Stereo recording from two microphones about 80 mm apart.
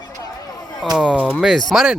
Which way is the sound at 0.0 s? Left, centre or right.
Left.